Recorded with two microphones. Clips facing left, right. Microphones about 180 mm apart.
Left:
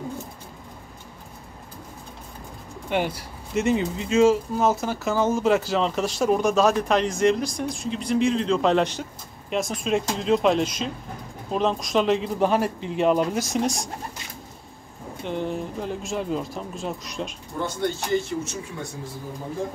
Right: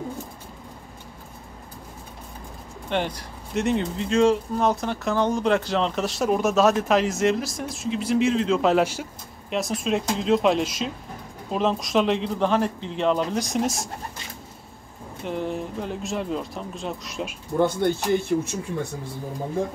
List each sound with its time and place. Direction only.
2.9 s speech: 10° left (ahead or behind)
15.2 s speech: centre (ahead or behind)
17.6 s speech: 60° right (ahead or behind)